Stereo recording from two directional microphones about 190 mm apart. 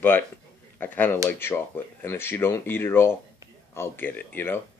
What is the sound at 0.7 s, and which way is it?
Speech, 10° left (ahead or behind).